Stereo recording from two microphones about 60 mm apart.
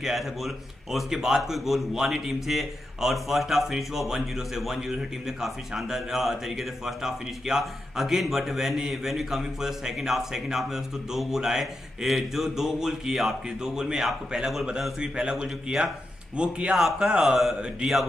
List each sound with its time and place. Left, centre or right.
0.0 s a man's voice: centre
16.7 s a man's voice: centre
17.6 s speech: centre